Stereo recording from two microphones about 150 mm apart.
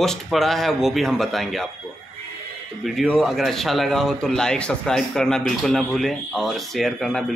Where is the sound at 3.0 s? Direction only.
Centre (ahead or behind).